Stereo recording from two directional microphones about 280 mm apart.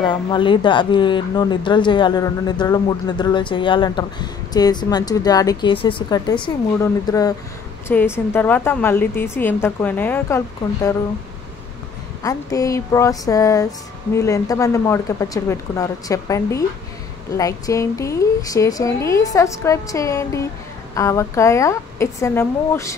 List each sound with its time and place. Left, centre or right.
0.0 s speech: centre
12.2 s speech: centre